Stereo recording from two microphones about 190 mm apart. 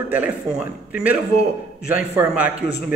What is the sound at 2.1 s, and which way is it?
Speech, 10° right (ahead or behind).